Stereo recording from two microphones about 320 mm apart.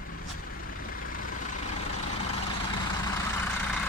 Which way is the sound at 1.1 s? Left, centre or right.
Left.